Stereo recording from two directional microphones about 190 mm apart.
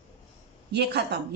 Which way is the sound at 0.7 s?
60° right (ahead or behind).